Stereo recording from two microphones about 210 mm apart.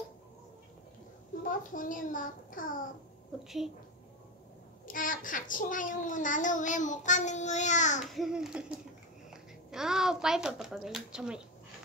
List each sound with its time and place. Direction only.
1.4 s a child's voice: 40° left (ahead or behind)
3.4 s a child's voice: centre (ahead or behind)
4.8 s a child's voice: 40° left (ahead or behind)
8.0 s a child's voice: centre (ahead or behind)